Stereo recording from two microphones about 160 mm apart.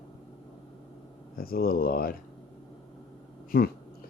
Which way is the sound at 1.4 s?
70° left (ahead or behind).